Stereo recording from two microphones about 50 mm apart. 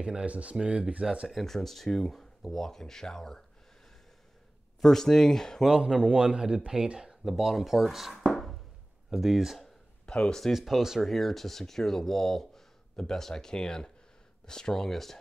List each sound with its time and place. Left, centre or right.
0.0 s speech: right
1.3 s speech: centre
4.8 s speech: centre
6.0 s speech: centre
7.2 s speech: centre
8.3 s a sound: centre
9.1 s speech: centre
9.6 s a sound: centre
10.4 s speech: centre
11.1 s speech: centre